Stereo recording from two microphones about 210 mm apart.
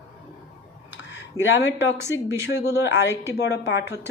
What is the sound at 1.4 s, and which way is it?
Speech, 15° left (ahead or behind).